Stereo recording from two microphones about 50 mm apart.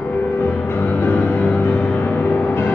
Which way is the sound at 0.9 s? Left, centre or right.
Left.